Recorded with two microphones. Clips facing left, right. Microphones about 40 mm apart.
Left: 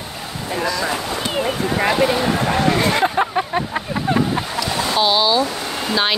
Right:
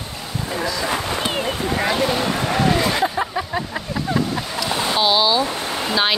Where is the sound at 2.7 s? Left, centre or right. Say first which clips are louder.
Left 3 dB; left.